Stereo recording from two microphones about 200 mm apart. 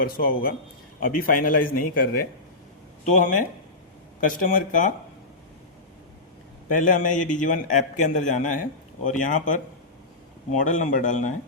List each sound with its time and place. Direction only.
0.0 s a man's voice: 45° left (ahead or behind)
6.7 s a man's voice: 40° left (ahead or behind)
10.6 s a man's voice: 40° left (ahead or behind)